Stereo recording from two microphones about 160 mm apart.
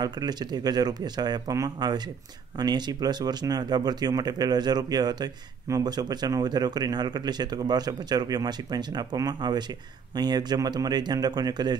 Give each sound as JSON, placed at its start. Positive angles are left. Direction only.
{"t": 0.0, "sound": "speech", "side_deg": -25}